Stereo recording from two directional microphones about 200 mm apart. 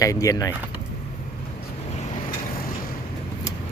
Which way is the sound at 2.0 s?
35° left (ahead or behind).